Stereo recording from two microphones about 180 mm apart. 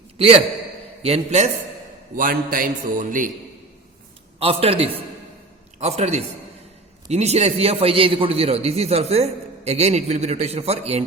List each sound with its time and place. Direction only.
0.2 s a man's voice: 30° right (ahead or behind)
2.1 s a man's voice: 50° right (ahead or behind)
4.4 s a man's voice: 30° right (ahead or behind)